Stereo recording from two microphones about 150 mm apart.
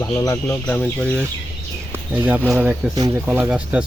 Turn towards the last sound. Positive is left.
turn(degrees=-5)  # may be behind; listen again after turning